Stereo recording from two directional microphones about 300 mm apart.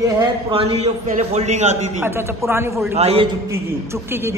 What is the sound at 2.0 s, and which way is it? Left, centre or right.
Speech, centre.